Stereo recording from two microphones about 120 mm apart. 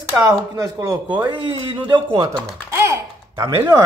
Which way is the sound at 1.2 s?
40° right (ahead or behind).